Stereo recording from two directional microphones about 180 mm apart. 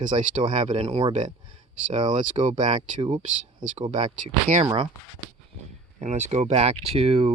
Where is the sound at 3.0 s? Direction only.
30° right (ahead or behind).